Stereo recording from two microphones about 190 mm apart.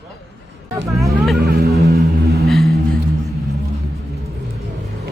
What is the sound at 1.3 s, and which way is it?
Music, 55° right (ahead or behind).